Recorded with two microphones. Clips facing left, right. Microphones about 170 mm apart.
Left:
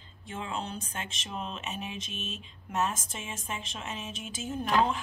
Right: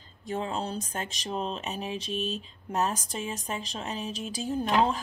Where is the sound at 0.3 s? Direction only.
35° right (ahead or behind).